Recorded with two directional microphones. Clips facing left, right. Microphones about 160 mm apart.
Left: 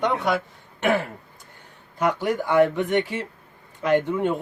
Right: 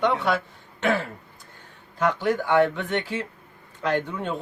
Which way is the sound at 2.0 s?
15° left (ahead or behind).